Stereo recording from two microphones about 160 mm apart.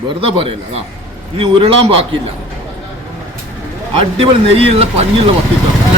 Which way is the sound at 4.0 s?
35° right (ahead or behind).